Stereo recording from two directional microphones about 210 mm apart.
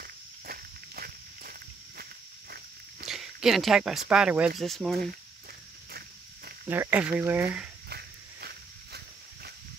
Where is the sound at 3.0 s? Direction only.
Centre (ahead or behind).